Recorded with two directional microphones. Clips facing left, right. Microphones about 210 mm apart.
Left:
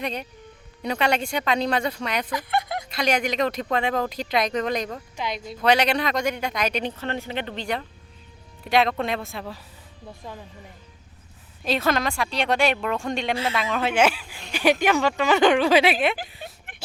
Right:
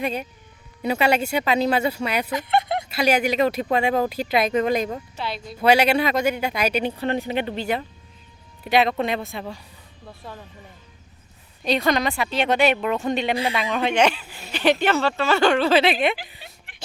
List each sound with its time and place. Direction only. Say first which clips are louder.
0.0 s speech: right 3 dB; 5° right (ahead or behind)
2.3 s a sound: right 4 dB; 25° right (ahead or behind)
2.9 s speech: right 3 dB; 5° right (ahead or behind)
5.1 s speech: even; 15° left (ahead or behind)
5.5 s speech: right 3 dB; 10° right (ahead or behind)
10.1 s speech: even; 15° left (ahead or behind)
11.6 s speech: right 2 dB; centre (ahead or behind)
13.3 s speech: right 2 dB; 15° right (ahead or behind)
13.6 s speech: even; centre (ahead or behind)